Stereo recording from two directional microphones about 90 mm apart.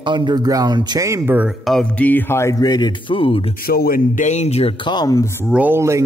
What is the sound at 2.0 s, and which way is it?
Speech, 20° left (ahead or behind).